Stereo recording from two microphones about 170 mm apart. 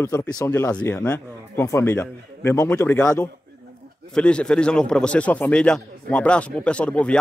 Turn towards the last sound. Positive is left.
turn(degrees=5)  # may be behind; listen again after turning